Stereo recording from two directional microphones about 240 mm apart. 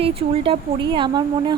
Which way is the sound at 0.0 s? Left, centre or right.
Right.